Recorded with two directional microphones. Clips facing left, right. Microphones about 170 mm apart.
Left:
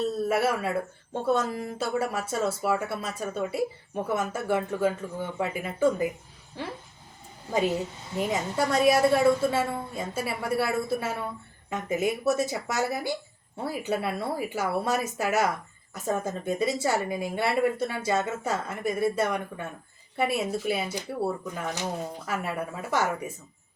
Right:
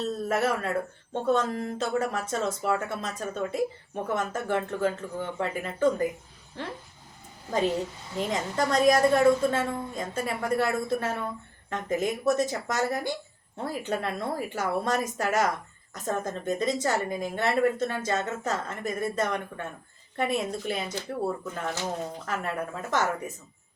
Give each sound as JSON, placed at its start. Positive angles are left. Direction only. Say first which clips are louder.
{"t": 0.3, "sound": "a woman's voice", "louder": "right 1 dB", "side_deg": 10}
{"t": 8.3, "sound": "a woman's voice", "louder": "even", "side_deg": 10}